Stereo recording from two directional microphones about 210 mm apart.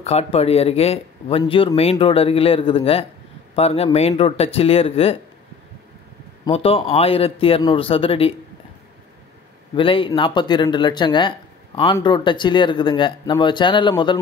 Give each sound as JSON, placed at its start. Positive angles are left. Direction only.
{"t": 0.0, "sound": "speech", "side_deg": 30}
{"t": 6.4, "sound": "speech", "side_deg": 25}
{"t": 9.8, "sound": "speech", "side_deg": 25}